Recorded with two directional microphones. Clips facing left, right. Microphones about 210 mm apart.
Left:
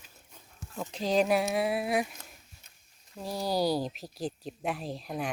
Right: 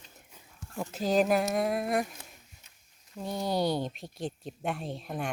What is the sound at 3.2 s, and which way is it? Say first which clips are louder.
Speech: even; 5° left (ahead or behind).